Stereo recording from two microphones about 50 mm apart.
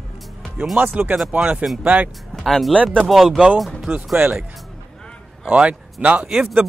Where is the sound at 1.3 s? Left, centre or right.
Right.